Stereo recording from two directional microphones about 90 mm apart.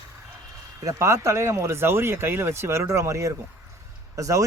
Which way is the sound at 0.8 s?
35° right (ahead or behind).